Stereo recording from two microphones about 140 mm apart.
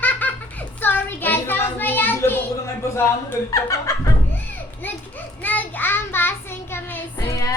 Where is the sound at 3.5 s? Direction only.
25° left (ahead or behind).